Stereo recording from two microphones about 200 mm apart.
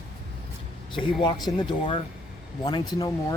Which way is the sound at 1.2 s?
20° left (ahead or behind).